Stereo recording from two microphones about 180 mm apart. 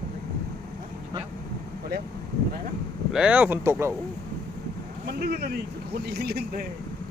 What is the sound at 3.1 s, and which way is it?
Speech, 5° right (ahead or behind).